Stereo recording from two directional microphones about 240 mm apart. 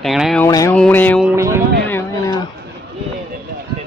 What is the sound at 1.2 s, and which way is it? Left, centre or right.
Speech, centre.